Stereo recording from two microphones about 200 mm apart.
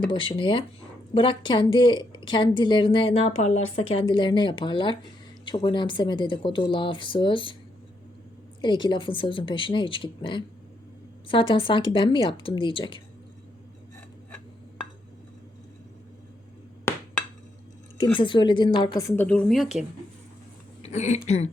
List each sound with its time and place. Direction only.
0.1 s a woman's voice: 25° left (ahead or behind)
8.8 s a woman's voice: 25° left (ahead or behind)
18.2 s a woman's voice: 25° left (ahead or behind); by 19.6 s 5° left (ahead or behind)
20.8 s speech: 35° left (ahead or behind)